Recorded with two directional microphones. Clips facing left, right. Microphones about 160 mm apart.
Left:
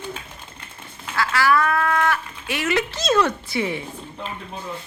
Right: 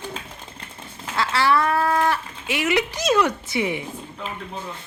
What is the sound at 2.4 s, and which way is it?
Speech, 15° right (ahead or behind).